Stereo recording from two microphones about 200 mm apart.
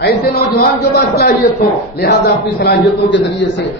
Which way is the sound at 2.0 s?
50° left (ahead or behind).